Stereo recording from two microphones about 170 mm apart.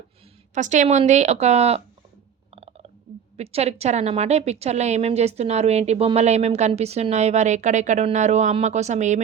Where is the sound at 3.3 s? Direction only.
40° right (ahead or behind).